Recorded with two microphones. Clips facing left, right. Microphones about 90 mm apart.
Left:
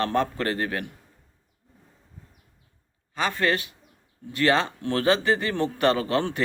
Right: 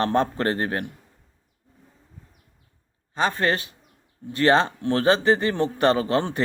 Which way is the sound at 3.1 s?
30° right (ahead or behind).